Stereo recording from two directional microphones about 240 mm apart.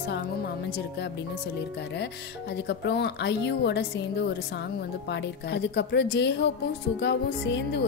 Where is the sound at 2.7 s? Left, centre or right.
Left.